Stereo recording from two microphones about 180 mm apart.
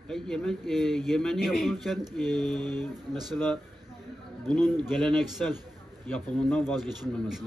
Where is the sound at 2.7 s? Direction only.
25° right (ahead or behind).